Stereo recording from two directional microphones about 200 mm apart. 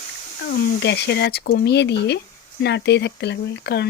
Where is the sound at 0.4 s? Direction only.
55° left (ahead or behind).